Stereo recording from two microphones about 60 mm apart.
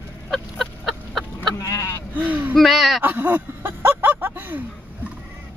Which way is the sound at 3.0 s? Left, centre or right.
Right.